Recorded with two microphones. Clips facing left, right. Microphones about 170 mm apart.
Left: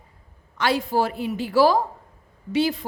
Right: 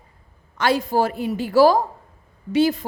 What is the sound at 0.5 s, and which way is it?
A woman's voice, 45° right (ahead or behind).